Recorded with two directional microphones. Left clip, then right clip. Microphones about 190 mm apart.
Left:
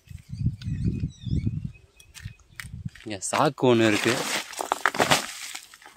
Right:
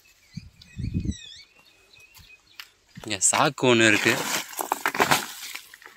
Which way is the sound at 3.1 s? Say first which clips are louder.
Right 2 dB; 25° left (ahead or behind).